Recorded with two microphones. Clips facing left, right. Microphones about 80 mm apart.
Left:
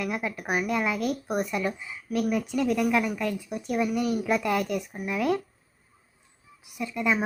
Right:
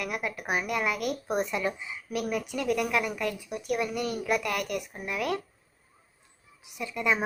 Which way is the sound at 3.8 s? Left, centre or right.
Centre.